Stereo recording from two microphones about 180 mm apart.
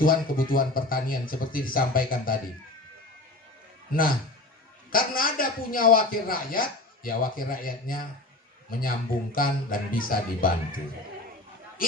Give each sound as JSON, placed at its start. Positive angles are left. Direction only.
{"t": 0.0, "sound": "a man's voice", "side_deg": 50}
{"t": 4.9, "sound": "a man's voice", "side_deg": 50}